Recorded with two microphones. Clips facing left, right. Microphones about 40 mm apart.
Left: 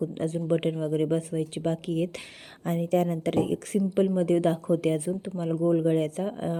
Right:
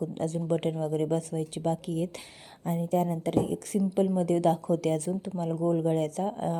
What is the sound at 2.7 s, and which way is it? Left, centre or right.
A woman's voice, left.